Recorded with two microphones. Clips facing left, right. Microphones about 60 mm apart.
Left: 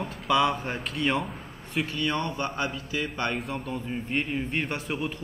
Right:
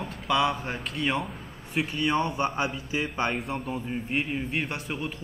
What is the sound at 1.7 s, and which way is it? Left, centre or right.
A man's voice, centre.